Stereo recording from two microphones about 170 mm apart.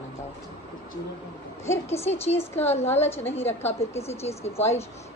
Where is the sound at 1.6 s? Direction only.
15° left (ahead or behind).